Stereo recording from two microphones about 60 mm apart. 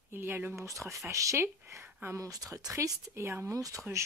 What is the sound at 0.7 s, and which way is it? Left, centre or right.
Speech, right.